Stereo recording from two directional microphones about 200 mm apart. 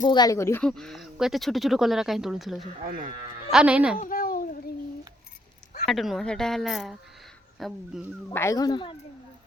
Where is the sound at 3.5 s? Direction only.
5° right (ahead or behind).